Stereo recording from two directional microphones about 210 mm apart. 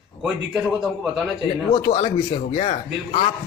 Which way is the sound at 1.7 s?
25° left (ahead or behind).